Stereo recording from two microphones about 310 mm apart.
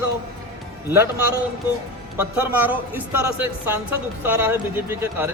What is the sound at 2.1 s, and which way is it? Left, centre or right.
A man's voice, centre.